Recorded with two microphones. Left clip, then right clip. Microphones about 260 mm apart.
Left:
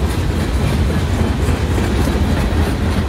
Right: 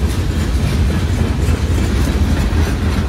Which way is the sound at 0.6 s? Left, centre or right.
Left.